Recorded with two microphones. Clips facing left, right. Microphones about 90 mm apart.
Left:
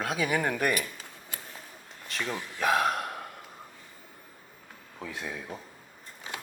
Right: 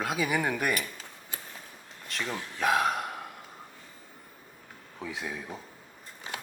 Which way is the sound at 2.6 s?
Centre (ahead or behind).